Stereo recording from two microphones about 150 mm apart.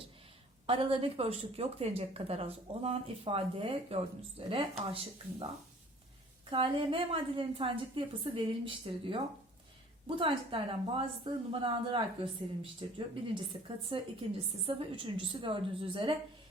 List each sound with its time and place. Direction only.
0.7 s speech: 35° right (ahead or behind)
6.5 s speech: 35° right (ahead or behind)